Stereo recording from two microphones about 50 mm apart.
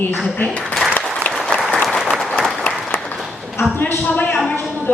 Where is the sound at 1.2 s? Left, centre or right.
Left.